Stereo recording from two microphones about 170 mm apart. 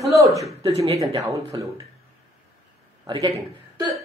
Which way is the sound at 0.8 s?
20° right (ahead or behind).